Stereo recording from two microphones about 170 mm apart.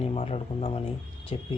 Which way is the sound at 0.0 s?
35° left (ahead or behind).